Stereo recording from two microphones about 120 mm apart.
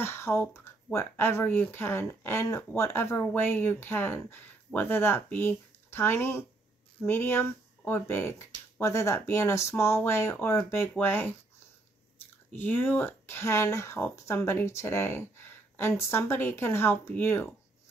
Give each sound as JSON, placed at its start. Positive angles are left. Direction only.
{"t": 0.0, "sound": "speech", "side_deg": 20}
{"t": 12.4, "sound": "speech", "side_deg": 15}